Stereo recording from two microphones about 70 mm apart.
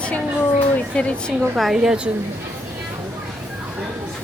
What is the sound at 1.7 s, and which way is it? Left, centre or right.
Speech, centre.